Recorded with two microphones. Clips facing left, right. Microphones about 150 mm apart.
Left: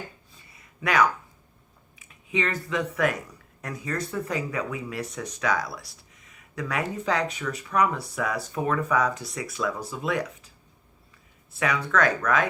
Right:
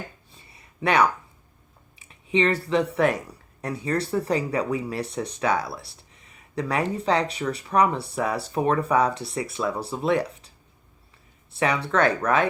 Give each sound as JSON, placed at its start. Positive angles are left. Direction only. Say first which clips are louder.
{"t": 0.3, "sound": "a sound", "louder": "right 2 dB", "side_deg": -30}
{"t": 2.9, "sound": "speech", "louder": "right 4 dB", "side_deg": -30}
{"t": 11.5, "sound": "speech", "louder": "right 2 dB", "side_deg": -30}